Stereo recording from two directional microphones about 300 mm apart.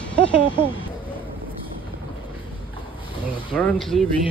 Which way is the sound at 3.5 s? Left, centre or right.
Centre.